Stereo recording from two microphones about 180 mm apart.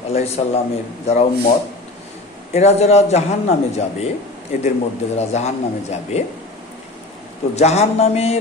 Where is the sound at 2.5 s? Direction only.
35° left (ahead or behind).